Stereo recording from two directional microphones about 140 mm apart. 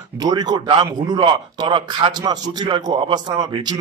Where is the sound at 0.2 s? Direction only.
30° right (ahead or behind).